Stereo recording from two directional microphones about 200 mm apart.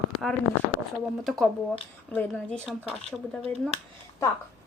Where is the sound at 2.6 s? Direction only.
10° right (ahead or behind).